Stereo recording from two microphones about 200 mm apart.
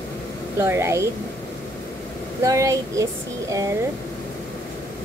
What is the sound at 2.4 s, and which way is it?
A woman's voice, 15° right (ahead or behind).